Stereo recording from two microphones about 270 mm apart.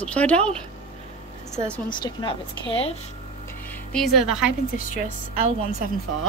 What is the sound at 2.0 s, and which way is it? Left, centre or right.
Speech, centre.